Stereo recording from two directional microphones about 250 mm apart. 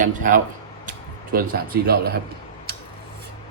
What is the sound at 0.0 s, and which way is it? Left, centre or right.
Speech, right.